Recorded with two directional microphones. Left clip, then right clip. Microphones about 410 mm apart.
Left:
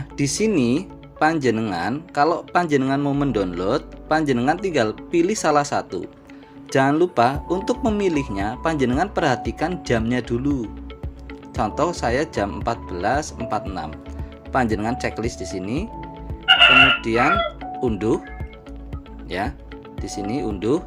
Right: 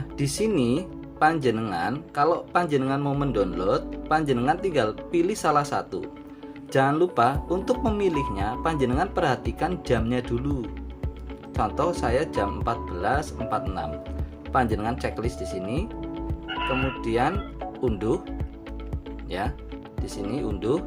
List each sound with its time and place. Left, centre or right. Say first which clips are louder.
0.2 s speech: left 4 dB; centre
16.5 s music: left 16 dB; left
17.0 s speech: left 7 dB; centre
19.3 s speech: left 4 dB; centre